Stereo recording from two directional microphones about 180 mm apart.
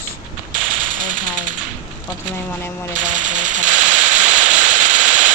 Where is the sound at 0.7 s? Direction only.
50° right (ahead or behind).